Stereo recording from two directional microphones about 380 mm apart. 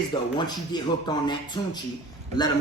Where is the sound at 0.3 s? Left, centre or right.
Centre.